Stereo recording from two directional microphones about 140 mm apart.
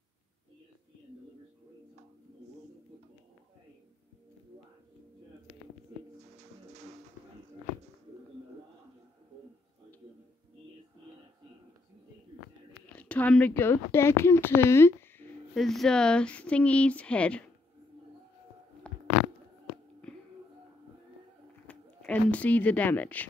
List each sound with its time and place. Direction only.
6.7 s music: 50° right (ahead or behind)
12.9 s speech: 10° left (ahead or behind)
15.5 s speech: centre (ahead or behind)
18.9 s a sound: 10° left (ahead or behind)
21.6 s speech: 10° left (ahead or behind)